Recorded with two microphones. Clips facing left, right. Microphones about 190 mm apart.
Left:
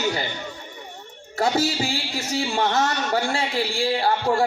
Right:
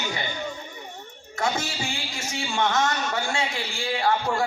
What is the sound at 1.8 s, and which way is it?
A man's voice, 35° left (ahead or behind).